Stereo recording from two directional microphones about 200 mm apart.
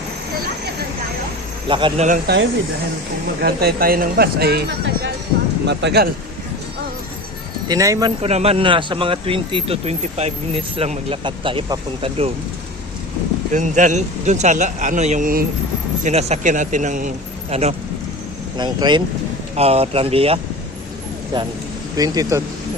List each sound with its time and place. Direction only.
1.6 s speech: 25° right (ahead or behind)
2.0 s speech: 55° right (ahead or behind)
7.7 s speech: 15° right (ahead or behind)
8.2 s speech: 30° right (ahead or behind)
13.5 s a man's voice: 40° right (ahead or behind)
18.5 s speech: 20° right (ahead or behind)